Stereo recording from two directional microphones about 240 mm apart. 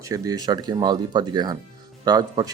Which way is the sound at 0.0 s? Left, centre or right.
Centre.